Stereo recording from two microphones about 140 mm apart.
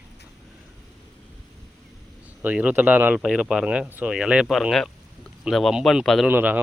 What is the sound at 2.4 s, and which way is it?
Speech, 10° right (ahead or behind).